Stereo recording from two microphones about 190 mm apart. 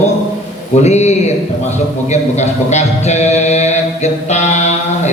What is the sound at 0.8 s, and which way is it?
Mantra, 35° left (ahead or behind).